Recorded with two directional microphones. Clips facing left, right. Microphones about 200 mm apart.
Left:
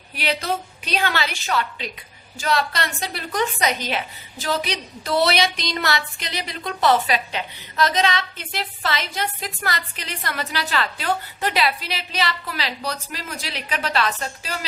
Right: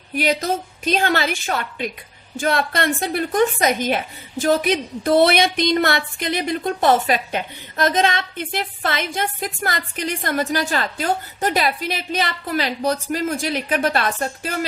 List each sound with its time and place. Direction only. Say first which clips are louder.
0.1 s a woman's voice: right 4 dB; 45° right (ahead or behind)